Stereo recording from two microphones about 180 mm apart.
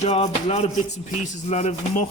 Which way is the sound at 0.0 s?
40° left (ahead or behind).